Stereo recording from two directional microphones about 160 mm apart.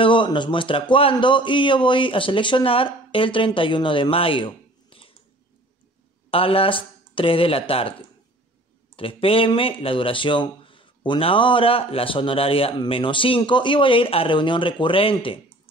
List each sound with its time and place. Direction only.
0.0 s speech: 30° left (ahead or behind)
6.3 s speech: 35° left (ahead or behind)
8.9 s speech: 35° left (ahead or behind)